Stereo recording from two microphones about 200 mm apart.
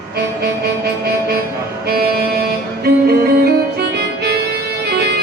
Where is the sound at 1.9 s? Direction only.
50° right (ahead or behind).